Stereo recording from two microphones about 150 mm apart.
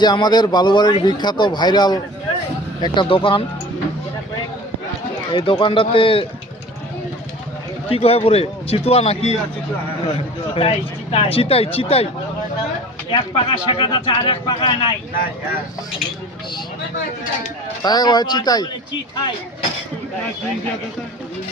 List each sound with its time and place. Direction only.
0.0 s speech: 30° left (ahead or behind)
5.3 s speech: 35° left (ahead or behind)
7.9 s speech: 40° left (ahead or behind)
10.5 s speech: 40° left (ahead or behind)
13.1 s speech: 35° left (ahead or behind)
17.8 s speech: 25° left (ahead or behind)